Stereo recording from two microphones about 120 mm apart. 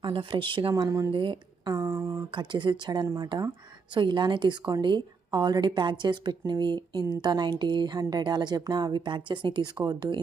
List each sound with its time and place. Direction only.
0.0 s a woman's voice: 45° right (ahead or behind)
0.7 s speech: 25° right (ahead or behind)
1.1 s speech: 40° right (ahead or behind)
1.8 s a sound: 20° right (ahead or behind)
2.3 s a woman's voice: 40° right (ahead or behind)